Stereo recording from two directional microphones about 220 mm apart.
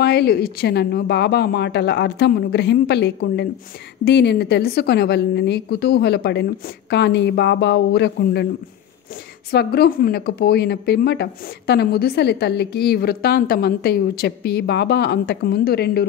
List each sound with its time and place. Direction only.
0.0 s a woman's voice: 50° left (ahead or behind)
9.5 s a woman's voice: 45° left (ahead or behind)